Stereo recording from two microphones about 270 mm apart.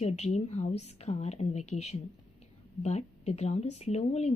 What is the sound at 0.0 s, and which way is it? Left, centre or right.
A woman's voice, left.